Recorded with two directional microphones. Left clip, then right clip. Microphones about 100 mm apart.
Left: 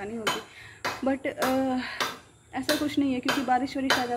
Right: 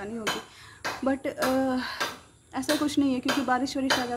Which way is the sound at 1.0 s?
30° right (ahead or behind).